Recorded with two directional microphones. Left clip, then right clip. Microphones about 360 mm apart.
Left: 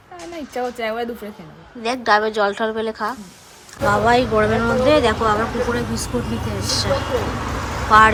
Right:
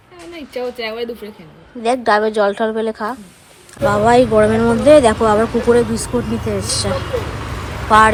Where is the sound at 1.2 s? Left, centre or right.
Left.